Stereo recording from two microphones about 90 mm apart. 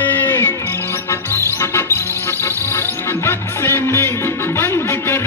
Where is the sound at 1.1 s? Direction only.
30° left (ahead or behind).